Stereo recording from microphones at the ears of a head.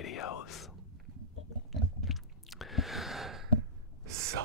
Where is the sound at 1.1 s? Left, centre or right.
Right.